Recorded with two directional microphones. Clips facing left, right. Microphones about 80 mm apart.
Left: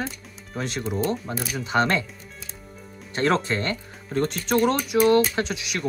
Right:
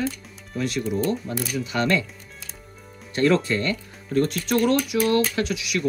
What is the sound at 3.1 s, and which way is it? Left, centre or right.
Speech, left.